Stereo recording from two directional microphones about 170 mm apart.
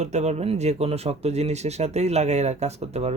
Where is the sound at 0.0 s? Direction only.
40° right (ahead or behind).